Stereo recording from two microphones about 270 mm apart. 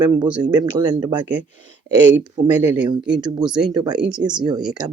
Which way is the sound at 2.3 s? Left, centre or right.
Centre.